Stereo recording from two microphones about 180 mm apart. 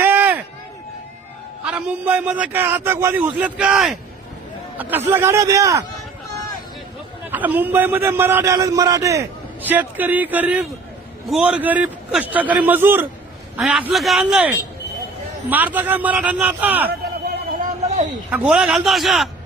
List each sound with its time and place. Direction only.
0.0 s run: 10° right (ahead or behind)
1.6 s a man's voice: 5° right (ahead or behind)
7.3 s a man's voice: 10° right (ahead or behind)
17.2 s a sound: 45° right (ahead or behind)
18.3 s a man's voice: 5° right (ahead or behind)